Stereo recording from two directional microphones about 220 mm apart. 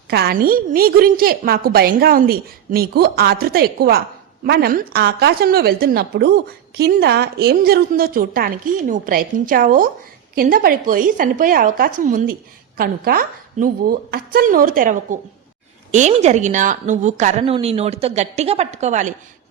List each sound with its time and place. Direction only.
0.1 s a woman's voice: 45° right (ahead or behind)